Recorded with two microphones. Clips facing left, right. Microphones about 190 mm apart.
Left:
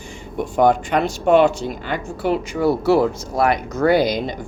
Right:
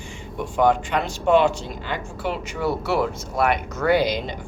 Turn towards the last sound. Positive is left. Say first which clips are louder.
# left 3 dB
turn(degrees=40)  # may be behind; listen again after turning